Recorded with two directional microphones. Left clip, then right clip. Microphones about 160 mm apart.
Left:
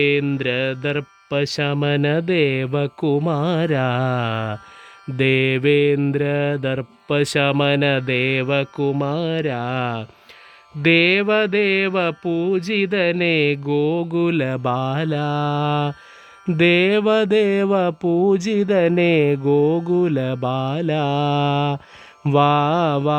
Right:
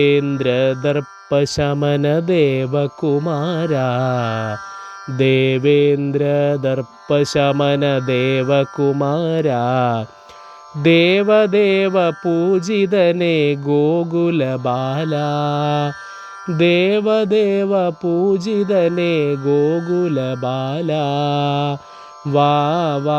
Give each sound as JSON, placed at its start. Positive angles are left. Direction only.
{"t": 0.0, "sound": "speech", "side_deg": 0}
{"t": 16.6, "sound": "music", "side_deg": 15}
{"t": 18.3, "sound": "speech", "side_deg": 25}